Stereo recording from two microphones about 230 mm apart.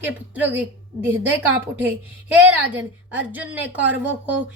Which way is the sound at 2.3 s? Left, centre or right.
Centre.